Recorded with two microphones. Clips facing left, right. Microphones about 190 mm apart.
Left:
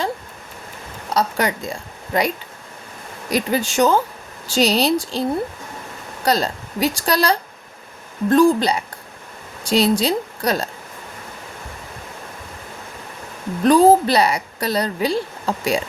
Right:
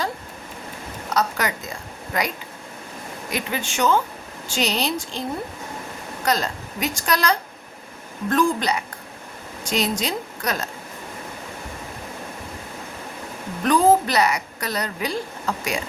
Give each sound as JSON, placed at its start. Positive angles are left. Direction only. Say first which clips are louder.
{"t": 1.1, "sound": "a woman's voice", "louder": "left 3 dB", "side_deg": 30}
{"t": 6.2, "sound": "a woman's voice", "louder": "left 4 dB", "side_deg": 30}
{"t": 13.7, "sound": "a woman's voice", "louder": "left 5 dB", "side_deg": 30}